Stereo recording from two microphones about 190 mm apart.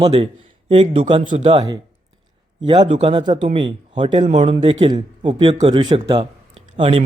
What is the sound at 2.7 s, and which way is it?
Speech, 25° right (ahead or behind).